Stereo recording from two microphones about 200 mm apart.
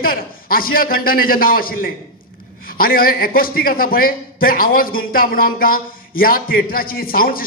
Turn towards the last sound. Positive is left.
turn(degrees=45)  # may be behind; listen again after turning